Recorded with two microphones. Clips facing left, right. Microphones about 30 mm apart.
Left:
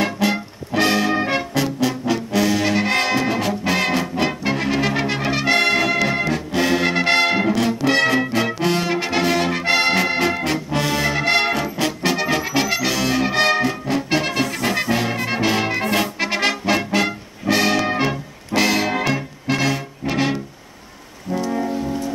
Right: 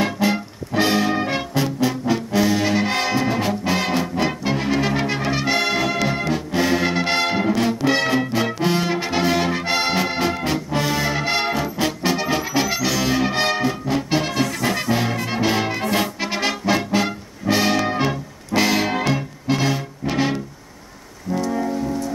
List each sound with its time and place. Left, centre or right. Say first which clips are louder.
0.0 s music: even; centre
4.1 s brass instrument: left 1 dB; centre
7.6 s music: left 2 dB; centre
10.3 s brass instrument: left 1 dB; centre
15.1 s music: left 1 dB; centre
16.0 s brass instrument: left 2 dB; centre
21.5 s music: left 1 dB; centre
21.8 s music: even; left